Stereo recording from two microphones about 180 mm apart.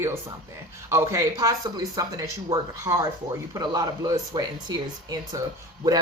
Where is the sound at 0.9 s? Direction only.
15° right (ahead or behind).